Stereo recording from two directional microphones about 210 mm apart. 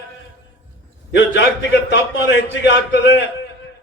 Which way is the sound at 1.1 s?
60° left (ahead or behind).